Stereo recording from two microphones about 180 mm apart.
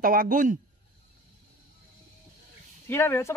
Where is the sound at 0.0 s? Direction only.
50° right (ahead or behind).